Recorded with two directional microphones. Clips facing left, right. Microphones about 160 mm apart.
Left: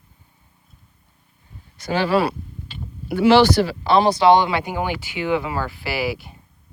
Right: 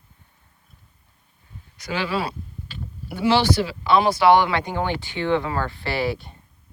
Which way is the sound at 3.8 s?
30° left (ahead or behind).